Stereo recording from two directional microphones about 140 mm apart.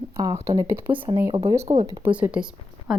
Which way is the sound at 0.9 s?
40° right (ahead or behind).